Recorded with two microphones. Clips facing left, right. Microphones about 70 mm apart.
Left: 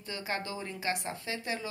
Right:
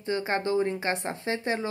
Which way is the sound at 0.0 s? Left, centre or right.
Right.